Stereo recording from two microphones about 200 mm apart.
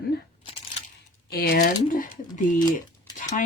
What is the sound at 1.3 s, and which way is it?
Speech, 45° left (ahead or behind).